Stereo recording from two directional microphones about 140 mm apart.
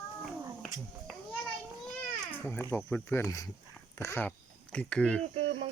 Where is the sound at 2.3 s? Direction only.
15° left (ahead or behind).